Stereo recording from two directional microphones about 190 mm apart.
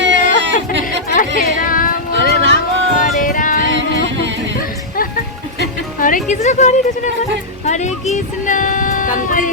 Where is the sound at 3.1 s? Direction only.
45° left (ahead or behind).